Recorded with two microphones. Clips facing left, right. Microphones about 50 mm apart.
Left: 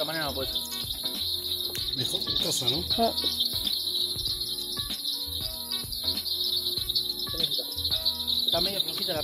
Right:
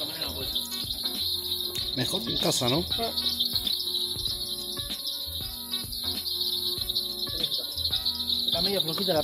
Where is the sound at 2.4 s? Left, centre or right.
Right.